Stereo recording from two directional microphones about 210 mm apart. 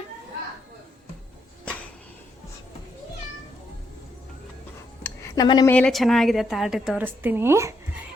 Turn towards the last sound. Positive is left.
turn(degrees=-15)  # may be behind; listen again after turning